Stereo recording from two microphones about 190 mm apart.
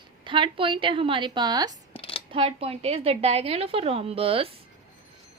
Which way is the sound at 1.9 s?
30° left (ahead or behind).